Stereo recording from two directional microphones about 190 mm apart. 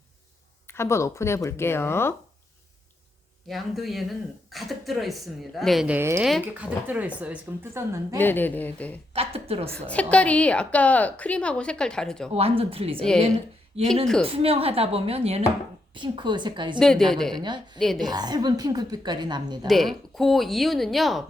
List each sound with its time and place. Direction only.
0.7 s a woman's voice: 15° left (ahead or behind)
3.5 s a woman's voice: centre (ahead or behind)
8.2 s a woman's voice: 10° left (ahead or behind)
9.1 s a sound: 30° right (ahead or behind)
9.7 s a woman's voice: 5° left (ahead or behind)
12.3 s a woman's voice: 30° right (ahead or behind)
13.0 s speech: 5° left (ahead or behind)
13.7 s a woman's voice: 30° right (ahead or behind)
16.8 s speech: centre (ahead or behind)
17.4 s a woman's voice: 25° right (ahead or behind)
17.7 s speech: centre (ahead or behind)
18.0 s a woman's voice: 20° right (ahead or behind)
19.6 s speech: centre (ahead or behind)